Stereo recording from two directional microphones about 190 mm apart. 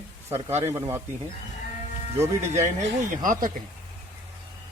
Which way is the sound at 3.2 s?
45° right (ahead or behind).